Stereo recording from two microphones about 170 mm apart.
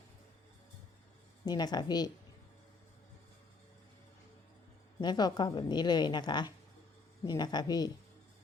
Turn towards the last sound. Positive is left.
turn(degrees=25)  # may be behind; listen again after turning